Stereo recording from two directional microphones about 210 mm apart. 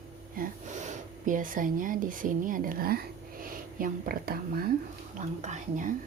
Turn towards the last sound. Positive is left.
turn(degrees=-35)  # may be behind; listen again after turning